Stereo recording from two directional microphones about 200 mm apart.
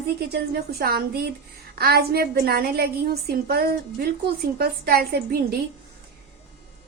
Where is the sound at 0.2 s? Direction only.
50° right (ahead or behind).